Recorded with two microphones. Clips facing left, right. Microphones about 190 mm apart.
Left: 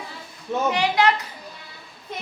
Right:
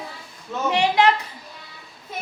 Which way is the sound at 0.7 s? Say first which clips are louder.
Right 3 dB; 25° right (ahead or behind).